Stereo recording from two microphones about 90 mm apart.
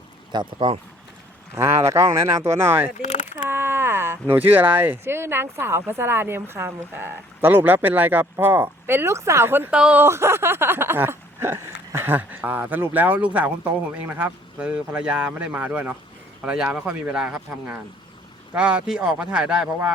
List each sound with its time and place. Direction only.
0.3 s speech: 60° right (ahead or behind)
1.5 s speech: 30° right (ahead or behind)
9.7 s speech: 10° right (ahead or behind)
10.0 s speech: 30° right (ahead or behind); by 19.6 s 10° right (ahead or behind)